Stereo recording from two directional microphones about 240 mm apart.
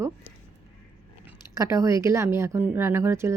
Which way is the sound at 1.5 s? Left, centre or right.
Centre.